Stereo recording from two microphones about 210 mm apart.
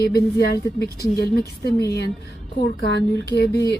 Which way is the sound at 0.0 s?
50° left (ahead or behind).